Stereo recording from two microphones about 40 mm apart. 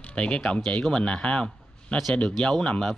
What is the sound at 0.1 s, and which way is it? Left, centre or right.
A man's voice, left.